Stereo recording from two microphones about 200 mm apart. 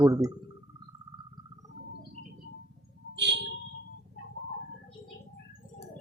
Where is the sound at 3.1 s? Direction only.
60° right (ahead or behind).